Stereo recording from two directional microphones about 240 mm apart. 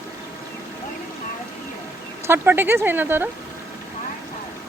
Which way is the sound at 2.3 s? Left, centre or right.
Centre.